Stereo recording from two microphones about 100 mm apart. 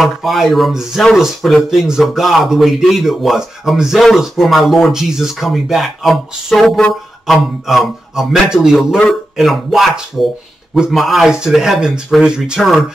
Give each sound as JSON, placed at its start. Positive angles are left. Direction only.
{"t": 0.0, "sound": "speech", "side_deg": 0}